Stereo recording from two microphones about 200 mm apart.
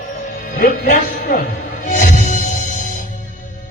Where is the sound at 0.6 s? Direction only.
45° left (ahead or behind).